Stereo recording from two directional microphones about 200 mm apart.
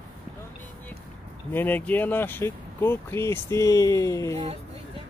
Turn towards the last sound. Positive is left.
turn(degrees=-30)  # may be behind; listen again after turning